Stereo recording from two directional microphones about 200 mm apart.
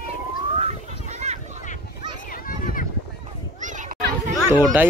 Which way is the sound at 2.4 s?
45° left (ahead or behind).